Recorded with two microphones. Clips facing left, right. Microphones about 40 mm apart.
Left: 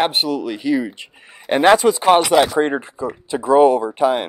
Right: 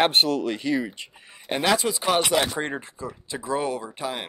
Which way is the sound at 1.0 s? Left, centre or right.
Left.